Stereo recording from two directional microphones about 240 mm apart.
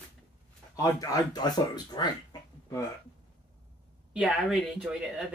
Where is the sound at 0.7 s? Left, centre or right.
Centre.